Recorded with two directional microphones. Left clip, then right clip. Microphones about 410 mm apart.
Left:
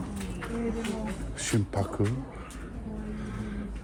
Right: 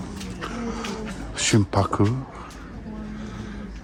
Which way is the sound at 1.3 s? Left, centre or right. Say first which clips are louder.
Right 10 dB; right.